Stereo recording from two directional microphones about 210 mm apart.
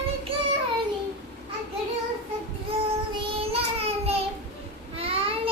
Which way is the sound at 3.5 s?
30° right (ahead or behind).